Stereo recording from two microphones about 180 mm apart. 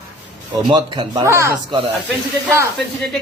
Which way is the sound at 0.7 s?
25° right (ahead or behind).